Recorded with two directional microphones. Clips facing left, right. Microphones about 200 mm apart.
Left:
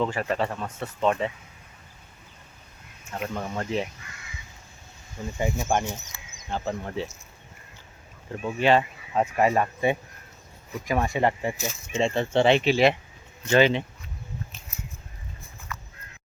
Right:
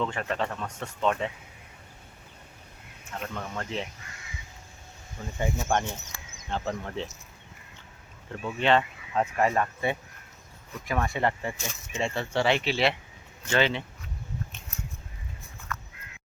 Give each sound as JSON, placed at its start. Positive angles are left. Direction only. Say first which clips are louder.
{"t": 0.1, "sound": "speech", "louder": "left 4 dB", "side_deg": 5}
{"t": 3.2, "sound": "speech", "louder": "left 4 dB", "side_deg": 15}
{"t": 5.4, "sound": "speech", "louder": "left 2 dB", "side_deg": 10}
{"t": 8.3, "sound": "speech", "louder": "left 3 dB", "side_deg": 10}
{"t": 8.8, "sound": "speech", "louder": "left 2 dB", "side_deg": 20}
{"t": 15.7, "sound": "fowl", "louder": "right 2 dB", "side_deg": 5}